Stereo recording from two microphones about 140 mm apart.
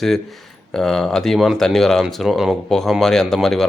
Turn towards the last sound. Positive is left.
turn(degrees=0)  # may be behind; listen again after turning